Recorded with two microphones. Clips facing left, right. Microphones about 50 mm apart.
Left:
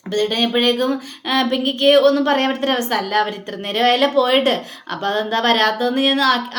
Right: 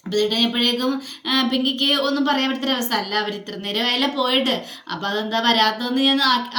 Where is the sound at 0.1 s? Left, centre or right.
Left.